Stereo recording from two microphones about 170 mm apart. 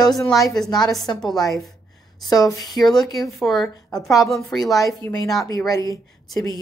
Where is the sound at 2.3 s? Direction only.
20° left (ahead or behind).